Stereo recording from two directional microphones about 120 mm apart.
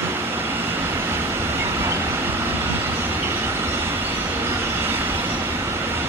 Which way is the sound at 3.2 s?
20° right (ahead or behind).